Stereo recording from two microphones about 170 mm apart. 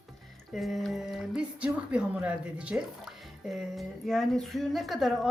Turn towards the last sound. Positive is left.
turn(degrees=0)  # may be behind; listen again after turning